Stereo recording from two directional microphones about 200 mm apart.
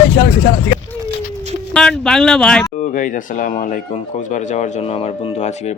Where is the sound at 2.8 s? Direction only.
40° left (ahead or behind).